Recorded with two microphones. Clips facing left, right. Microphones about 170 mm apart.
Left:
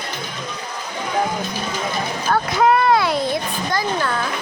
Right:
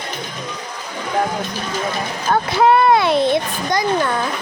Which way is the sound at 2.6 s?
25° right (ahead or behind).